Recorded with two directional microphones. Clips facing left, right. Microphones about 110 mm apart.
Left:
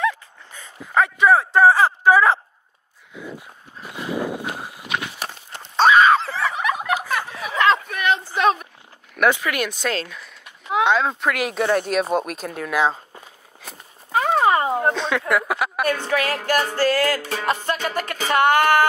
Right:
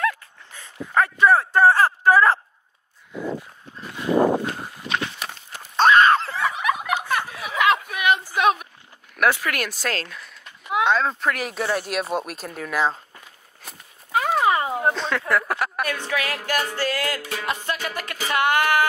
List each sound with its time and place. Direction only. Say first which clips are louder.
0.0 s dog: left 2 dB; centre (ahead or behind)
4.5 s walk: even; 10° left (ahead or behind)
5.2 s horse: left 2 dB; 30° left (ahead or behind)
5.8 s a sound: left 1 dB; 5° left (ahead or behind)
6.9 s snicker: left 1 dB; centre (ahead or behind)
7.4 s a sound: left 2 dB; 10° right (ahead or behind)
9.1 s speech: left 2 dB; centre (ahead or behind)
11.7 s speech: left 5 dB; 5° right (ahead or behind)
14.1 s horse: left 2 dB; 35° left (ahead or behind)
14.8 s a sound: left 2 dB; 5° right (ahead or behind)
15.8 s music: left 5 dB; 35° left (ahead or behind)